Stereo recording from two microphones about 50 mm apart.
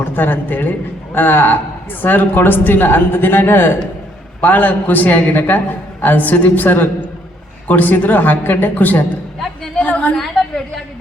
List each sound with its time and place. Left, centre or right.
0.0 s a man's voice: left
4.4 s a man's voice: left
10.2 s a sound: centre